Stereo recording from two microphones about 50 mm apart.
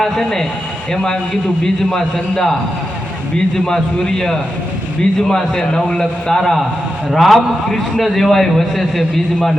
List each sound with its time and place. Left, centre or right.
0.0 s a man's voice: centre
1.6 s a man's voice: centre